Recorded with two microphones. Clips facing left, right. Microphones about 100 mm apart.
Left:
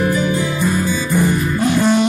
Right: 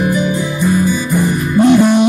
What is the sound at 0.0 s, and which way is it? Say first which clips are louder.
Music: right 2 dB; 15° right (ahead or behind).